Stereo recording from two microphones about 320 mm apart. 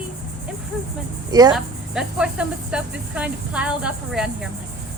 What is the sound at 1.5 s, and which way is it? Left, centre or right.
Speech, centre.